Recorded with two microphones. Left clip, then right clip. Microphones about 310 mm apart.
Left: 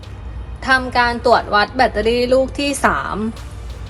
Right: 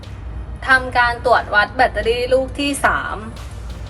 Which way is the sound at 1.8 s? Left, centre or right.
Left.